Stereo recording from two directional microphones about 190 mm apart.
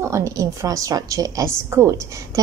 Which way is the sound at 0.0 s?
15° right (ahead or behind).